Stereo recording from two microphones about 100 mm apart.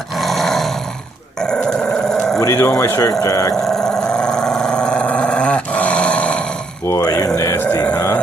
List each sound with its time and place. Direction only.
0.2 s roar: centre (ahead or behind)
1.4 s dog: 10° left (ahead or behind)
2.4 s speech: 30° left (ahead or behind)
3.6 s dog: 5° left (ahead or behind)
6.9 s speech: 35° left (ahead or behind)